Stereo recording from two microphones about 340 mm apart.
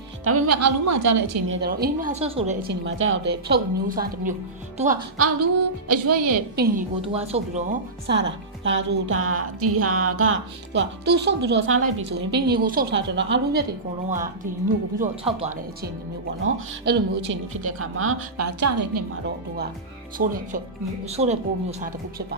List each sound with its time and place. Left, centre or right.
0.3 s a woman's voice: right
1.5 s speech: right
2.6 s speech: right
5.1 s a woman's voice: right
6.6 s a woman's voice: right
14.9 s speech: right
16.4 s a woman's voice: right
20.1 s speech: right